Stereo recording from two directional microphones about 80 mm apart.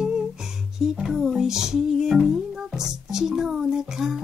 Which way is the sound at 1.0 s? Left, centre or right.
Centre.